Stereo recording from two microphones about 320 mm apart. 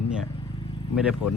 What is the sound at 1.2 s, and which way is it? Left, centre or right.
Speech, left.